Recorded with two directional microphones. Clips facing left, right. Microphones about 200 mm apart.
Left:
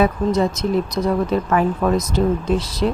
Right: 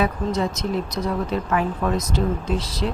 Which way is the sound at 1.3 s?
50° left (ahead or behind).